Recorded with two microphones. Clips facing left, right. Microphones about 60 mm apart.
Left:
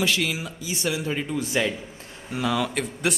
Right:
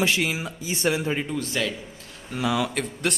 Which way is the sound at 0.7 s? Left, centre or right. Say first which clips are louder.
Right 3 dB; right.